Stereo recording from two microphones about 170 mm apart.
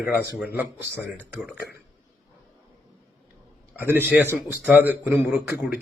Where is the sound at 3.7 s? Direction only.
10° right (ahead or behind).